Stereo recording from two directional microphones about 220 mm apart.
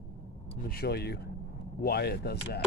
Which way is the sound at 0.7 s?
45° left (ahead or behind).